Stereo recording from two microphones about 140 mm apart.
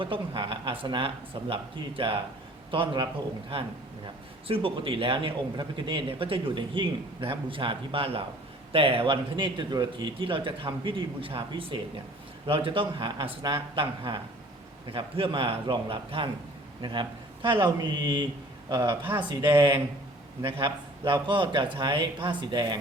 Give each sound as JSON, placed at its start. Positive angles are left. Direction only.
{"t": 0.0, "sound": "speech", "side_deg": -40}
{"t": 4.4, "sound": "speech", "side_deg": -40}
{"t": 20.4, "sound": "speech", "side_deg": -30}